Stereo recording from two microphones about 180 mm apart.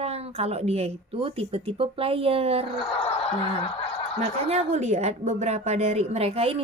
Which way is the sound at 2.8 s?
30° left (ahead or behind).